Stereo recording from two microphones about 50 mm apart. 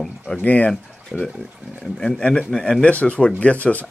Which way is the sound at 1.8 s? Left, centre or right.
Centre.